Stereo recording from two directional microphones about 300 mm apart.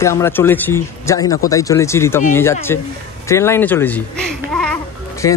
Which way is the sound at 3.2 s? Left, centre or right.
Centre.